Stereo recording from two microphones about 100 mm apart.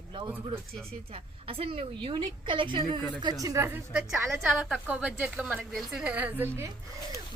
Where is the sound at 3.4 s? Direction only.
30° right (ahead or behind).